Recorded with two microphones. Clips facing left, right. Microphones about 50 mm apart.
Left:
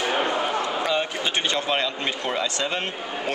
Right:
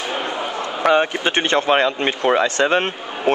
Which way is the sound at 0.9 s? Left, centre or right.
Right.